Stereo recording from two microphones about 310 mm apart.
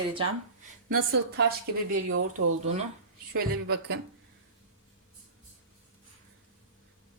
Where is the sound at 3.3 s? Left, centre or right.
Right.